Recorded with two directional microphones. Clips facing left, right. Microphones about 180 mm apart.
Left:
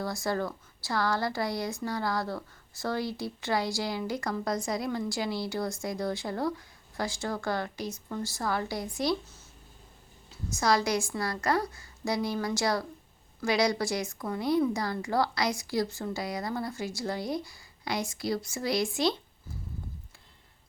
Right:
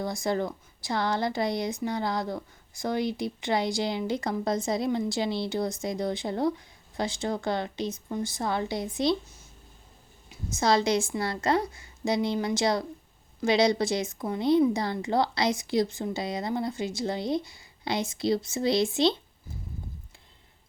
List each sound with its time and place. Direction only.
0.0 s speech: 20° right (ahead or behind)
10.2 s speech: 25° right (ahead or behind)